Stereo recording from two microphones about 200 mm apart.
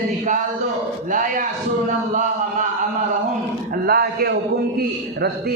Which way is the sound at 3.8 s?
50° right (ahead or behind).